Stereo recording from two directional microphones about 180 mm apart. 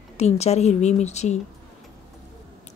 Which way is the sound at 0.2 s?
35° left (ahead or behind).